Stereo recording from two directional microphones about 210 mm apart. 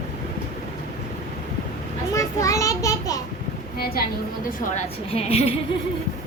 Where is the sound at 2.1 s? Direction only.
15° left (ahead or behind).